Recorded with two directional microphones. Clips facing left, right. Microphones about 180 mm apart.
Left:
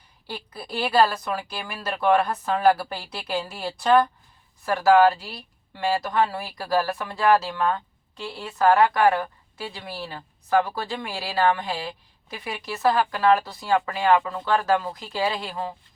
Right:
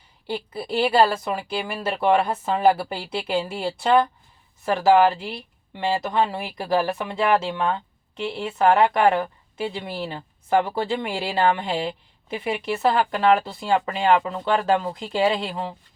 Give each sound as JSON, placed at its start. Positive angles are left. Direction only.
{"t": 0.3, "sound": "speech", "side_deg": -25}